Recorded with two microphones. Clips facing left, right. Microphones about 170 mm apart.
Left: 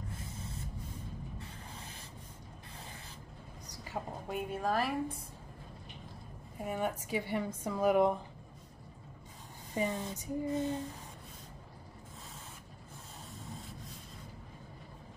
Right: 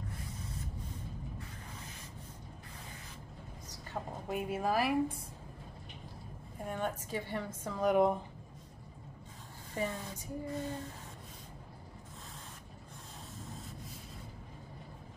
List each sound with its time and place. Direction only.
0.1 s spray: 25° left (ahead or behind)
3.9 s a woman's voice: centre (ahead or behind)
6.6 s a woman's voice: 10° left (ahead or behind)
9.8 s a sound: 20° left (ahead or behind)